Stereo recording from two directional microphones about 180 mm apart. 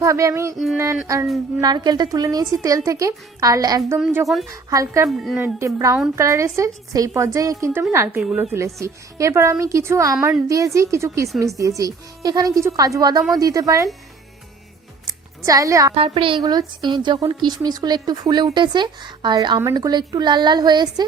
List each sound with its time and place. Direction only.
0.0 s a woman's voice: 15° right (ahead or behind)
0.5 s a woman's voice: centre (ahead or behind)
1.0 s a woman's voice: 15° right (ahead or behind)
5.0 s a woman's voice: centre (ahead or behind)
5.5 s a woman's voice: 15° right (ahead or behind)
8.5 s a woman's voice: 15° right (ahead or behind)
15.4 s speech: 20° right (ahead or behind)
16.0 s speech: 30° right (ahead or behind)